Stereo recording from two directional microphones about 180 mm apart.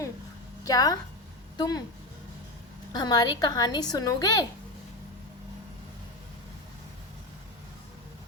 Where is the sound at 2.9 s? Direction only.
25° left (ahead or behind).